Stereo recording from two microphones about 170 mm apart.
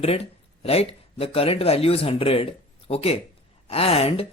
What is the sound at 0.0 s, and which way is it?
Speech, 35° left (ahead or behind).